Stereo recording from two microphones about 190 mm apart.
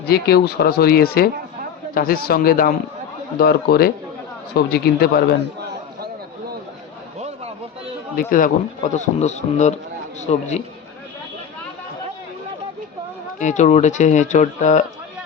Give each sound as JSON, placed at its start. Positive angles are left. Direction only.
{"t": 0.0, "sound": "a man's voice", "side_deg": 55}
{"t": 8.1, "sound": "a man's voice", "side_deg": 45}
{"t": 13.4, "sound": "a man's voice", "side_deg": 40}